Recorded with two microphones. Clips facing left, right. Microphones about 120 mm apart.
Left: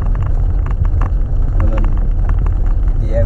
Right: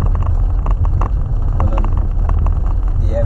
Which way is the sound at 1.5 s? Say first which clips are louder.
Even; 40° right (ahead or behind).